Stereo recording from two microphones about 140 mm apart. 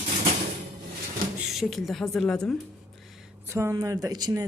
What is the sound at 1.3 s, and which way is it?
A woman's voice, centre (ahead or behind).